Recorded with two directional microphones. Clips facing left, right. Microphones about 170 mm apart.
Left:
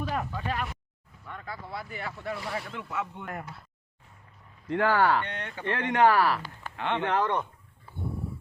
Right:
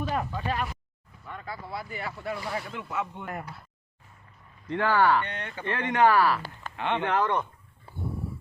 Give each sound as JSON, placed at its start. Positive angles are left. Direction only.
{"t": 0.0, "sound": "a sound", "side_deg": -25}
{"t": 1.3, "sound": "speech", "side_deg": -15}
{"t": 2.3, "sound": "speech", "side_deg": 0}
{"t": 2.6, "sound": "speech", "side_deg": -15}
{"t": 4.7, "sound": "speech", "side_deg": 45}
{"t": 5.2, "sound": "speech", "side_deg": 0}
{"t": 6.0, "sound": "speech", "side_deg": 40}
{"t": 6.7, "sound": "speech", "side_deg": -15}
{"t": 7.1, "sound": "speech", "side_deg": 20}